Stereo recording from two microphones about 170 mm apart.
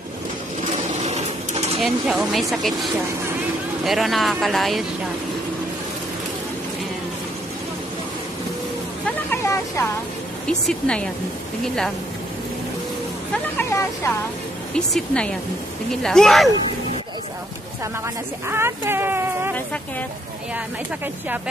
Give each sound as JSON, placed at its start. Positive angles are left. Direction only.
{"t": 1.0, "sound": "a sound", "side_deg": -40}
{"t": 1.8, "sound": "speech", "side_deg": 0}
{"t": 9.0, "sound": "vehicle", "side_deg": 15}
{"t": 10.4, "sound": "speech", "side_deg": 5}
{"t": 13.6, "sound": "speech", "side_deg": 15}
{"t": 14.7, "sound": "speech", "side_deg": 5}
{"t": 18.0, "sound": "speech", "side_deg": -15}